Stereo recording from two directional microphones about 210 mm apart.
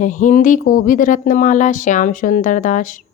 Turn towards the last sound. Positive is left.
turn(degrees=40)  # may be behind; listen again after turning